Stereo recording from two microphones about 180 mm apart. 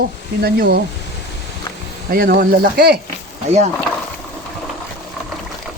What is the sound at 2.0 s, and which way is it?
Speech, 55° right (ahead or behind).